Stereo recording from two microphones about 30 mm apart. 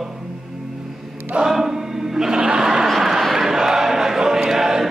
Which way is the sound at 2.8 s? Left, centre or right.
Centre.